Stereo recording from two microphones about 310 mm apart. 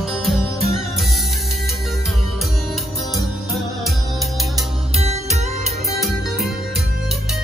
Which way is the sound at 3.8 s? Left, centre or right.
Centre.